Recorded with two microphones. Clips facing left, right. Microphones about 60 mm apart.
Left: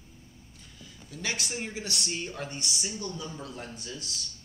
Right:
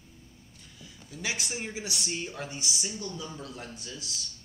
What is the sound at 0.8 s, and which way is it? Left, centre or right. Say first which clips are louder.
Speech: even; centre.